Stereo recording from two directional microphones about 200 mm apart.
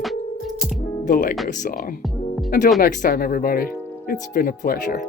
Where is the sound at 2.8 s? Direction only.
45° left (ahead or behind).